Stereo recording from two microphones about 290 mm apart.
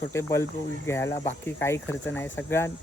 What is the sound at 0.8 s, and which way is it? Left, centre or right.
Speech, centre.